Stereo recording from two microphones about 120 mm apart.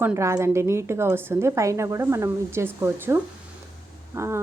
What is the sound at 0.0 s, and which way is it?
A woman's voice, 20° right (ahead or behind).